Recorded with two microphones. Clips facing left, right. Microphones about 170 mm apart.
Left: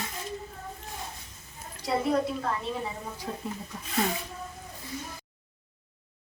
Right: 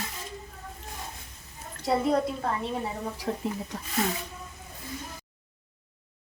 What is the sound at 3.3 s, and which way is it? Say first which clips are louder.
Speech: right 6 dB; 60° right (ahead or behind).